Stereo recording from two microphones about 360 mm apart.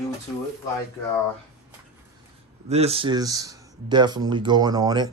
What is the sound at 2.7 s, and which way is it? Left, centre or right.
Speech, centre.